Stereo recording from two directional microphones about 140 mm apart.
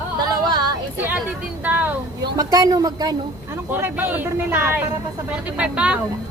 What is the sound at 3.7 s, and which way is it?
Speech, 15° right (ahead or behind).